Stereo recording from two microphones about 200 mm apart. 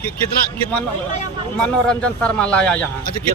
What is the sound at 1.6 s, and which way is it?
A man's voice, 5° left (ahead or behind).